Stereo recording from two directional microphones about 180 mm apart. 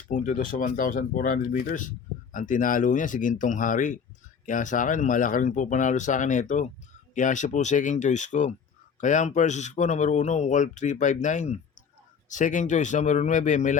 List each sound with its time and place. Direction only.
0.1 s speech: 45° left (ahead or behind)